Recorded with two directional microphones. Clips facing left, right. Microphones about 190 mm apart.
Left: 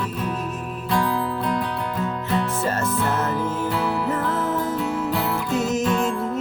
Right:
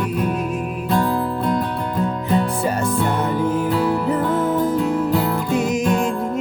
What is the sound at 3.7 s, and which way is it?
Music, 40° right (ahead or behind).